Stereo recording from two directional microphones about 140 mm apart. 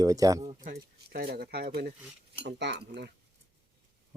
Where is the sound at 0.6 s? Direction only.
90° right.